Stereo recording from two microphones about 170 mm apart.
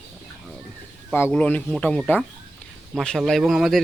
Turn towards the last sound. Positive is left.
turn(degrees=0)  # may be behind; listen again after turning